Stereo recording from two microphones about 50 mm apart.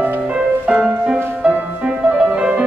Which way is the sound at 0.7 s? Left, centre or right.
Right.